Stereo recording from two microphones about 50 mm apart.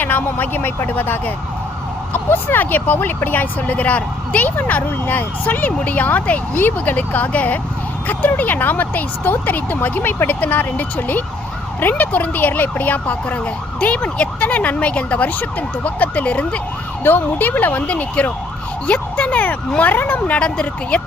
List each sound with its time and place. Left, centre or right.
0.0 s speech: left
6.5 s speech: left
17.0 s speech: left
20.4 s speech: left